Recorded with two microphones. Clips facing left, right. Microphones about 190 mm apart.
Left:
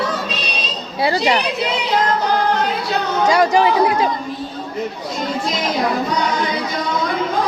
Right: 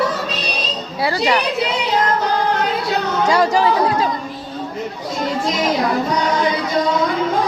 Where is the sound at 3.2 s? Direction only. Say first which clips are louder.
Left 1 dB; 15° left (ahead or behind).